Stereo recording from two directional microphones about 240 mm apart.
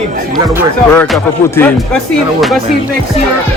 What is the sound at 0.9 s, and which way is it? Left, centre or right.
Music, centre.